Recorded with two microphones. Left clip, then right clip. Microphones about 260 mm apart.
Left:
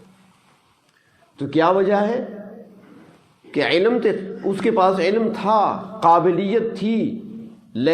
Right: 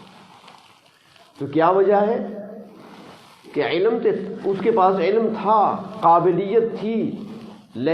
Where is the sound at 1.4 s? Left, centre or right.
Left.